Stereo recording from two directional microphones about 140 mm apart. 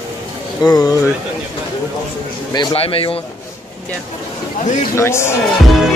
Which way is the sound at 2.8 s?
40° left (ahead or behind).